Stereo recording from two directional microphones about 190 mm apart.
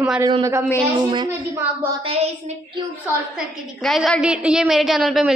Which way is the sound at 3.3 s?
Centre (ahead or behind).